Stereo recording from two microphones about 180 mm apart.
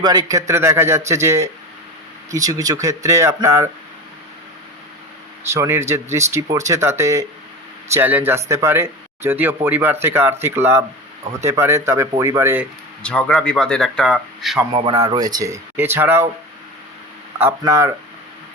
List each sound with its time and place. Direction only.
0.0 s speech: 25° right (ahead or behind)
5.5 s speech: 15° right (ahead or behind)
13.0 s speech: 5° left (ahead or behind)
14.7 s speech: 25° right (ahead or behind)
17.6 s speech: 15° right (ahead or behind)